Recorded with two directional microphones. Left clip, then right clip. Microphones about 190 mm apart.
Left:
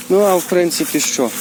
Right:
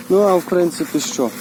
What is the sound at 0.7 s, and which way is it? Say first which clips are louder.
Speech: left 4 dB; 30° left (ahead or behind).